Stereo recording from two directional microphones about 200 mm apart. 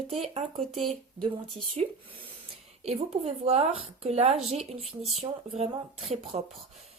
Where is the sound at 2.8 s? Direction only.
30° right (ahead or behind).